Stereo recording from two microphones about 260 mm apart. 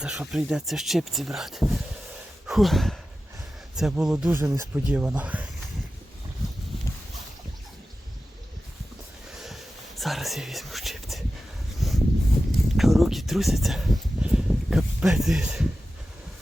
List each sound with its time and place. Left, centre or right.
0.0 s speech: centre
9.4 s whispering: centre
11.8 s a sound: centre